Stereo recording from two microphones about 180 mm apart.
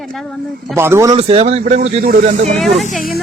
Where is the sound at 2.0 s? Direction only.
55° right (ahead or behind).